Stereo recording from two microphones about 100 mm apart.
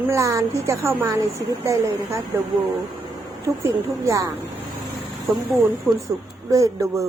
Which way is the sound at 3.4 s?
30° right (ahead or behind).